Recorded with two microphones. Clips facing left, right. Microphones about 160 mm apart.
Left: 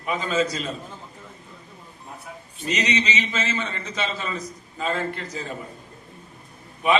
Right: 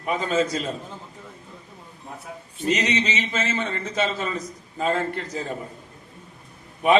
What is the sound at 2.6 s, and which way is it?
A man's voice, 50° right (ahead or behind).